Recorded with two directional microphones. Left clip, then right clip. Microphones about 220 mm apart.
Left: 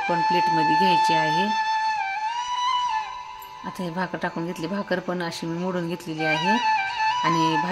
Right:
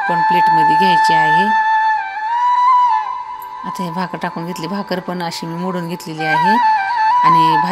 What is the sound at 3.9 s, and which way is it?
Speech, 5° right (ahead or behind).